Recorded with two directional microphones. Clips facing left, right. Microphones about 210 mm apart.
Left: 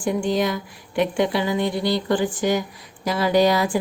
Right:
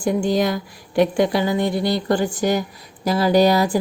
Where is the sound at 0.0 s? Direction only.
40° right (ahead or behind).